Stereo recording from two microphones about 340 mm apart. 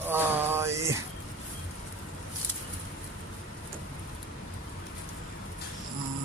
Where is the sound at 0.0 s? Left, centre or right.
Centre.